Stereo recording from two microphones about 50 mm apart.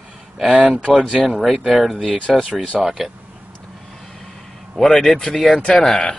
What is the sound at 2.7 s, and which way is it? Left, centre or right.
Mantra, centre.